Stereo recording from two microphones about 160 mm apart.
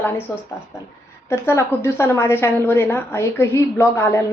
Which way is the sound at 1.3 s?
15° left (ahead or behind).